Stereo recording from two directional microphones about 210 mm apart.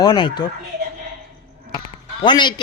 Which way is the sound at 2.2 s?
20° left (ahead or behind).